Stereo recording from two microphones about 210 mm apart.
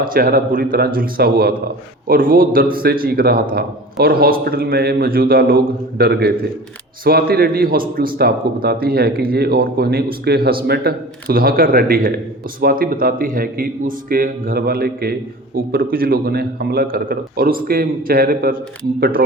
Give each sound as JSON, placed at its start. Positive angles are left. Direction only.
{"t": 0.0, "sound": "a man's voice", "side_deg": -45}